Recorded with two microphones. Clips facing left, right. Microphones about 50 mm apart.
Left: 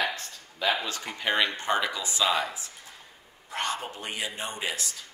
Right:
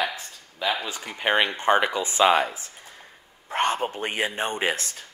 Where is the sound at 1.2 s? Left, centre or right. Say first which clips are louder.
Right 4 dB; right.